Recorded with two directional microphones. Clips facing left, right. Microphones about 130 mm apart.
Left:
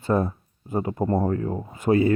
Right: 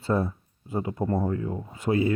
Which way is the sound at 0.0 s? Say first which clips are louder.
Left 3 dB; 50° left (ahead or behind).